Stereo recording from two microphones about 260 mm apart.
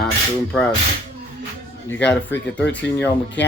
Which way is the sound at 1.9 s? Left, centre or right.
Centre.